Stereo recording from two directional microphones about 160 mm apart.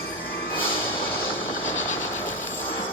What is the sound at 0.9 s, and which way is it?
Music, 15° left (ahead or behind).